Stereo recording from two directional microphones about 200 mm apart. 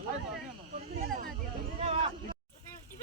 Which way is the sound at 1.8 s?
30° right (ahead or behind).